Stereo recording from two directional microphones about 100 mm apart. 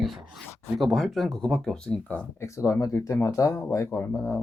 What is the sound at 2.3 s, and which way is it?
Speech, 30° left (ahead or behind).